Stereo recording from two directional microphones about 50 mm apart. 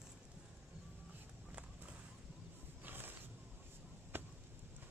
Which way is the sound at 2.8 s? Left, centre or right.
Right.